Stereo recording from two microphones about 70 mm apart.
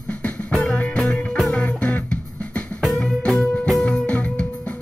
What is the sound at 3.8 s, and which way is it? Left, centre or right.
Music, centre.